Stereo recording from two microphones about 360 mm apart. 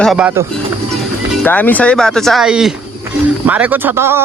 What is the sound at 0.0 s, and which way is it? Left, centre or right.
Speech, centre.